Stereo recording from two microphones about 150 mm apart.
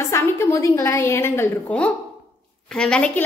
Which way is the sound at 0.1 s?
20° left (ahead or behind).